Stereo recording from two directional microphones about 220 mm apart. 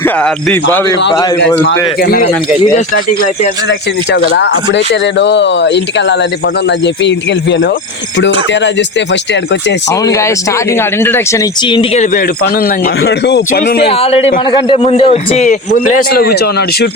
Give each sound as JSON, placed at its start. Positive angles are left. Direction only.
{"t": 0.0, "sound": "speech", "side_deg": 10}
{"t": 2.0, "sound": "speech", "side_deg": 45}
{"t": 3.7, "sound": "speech", "side_deg": 55}
{"t": 9.9, "sound": "speech", "side_deg": 15}
{"t": 12.1, "sound": "speech", "side_deg": 40}
{"t": 13.8, "sound": "speech", "side_deg": 25}